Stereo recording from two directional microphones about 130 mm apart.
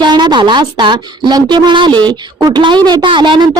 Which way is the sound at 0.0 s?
35° right (ahead or behind).